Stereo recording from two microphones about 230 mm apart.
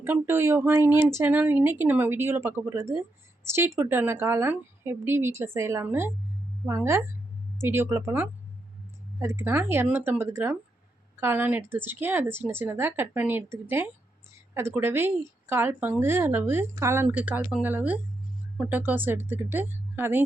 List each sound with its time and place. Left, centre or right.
0.0 s speech: centre